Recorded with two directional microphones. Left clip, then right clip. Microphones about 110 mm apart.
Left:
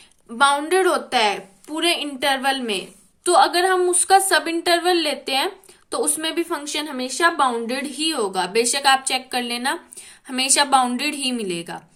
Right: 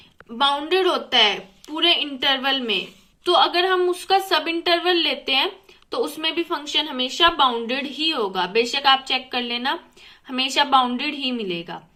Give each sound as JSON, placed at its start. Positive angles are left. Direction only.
{"t": 0.3, "sound": "a woman's voice", "side_deg": 30}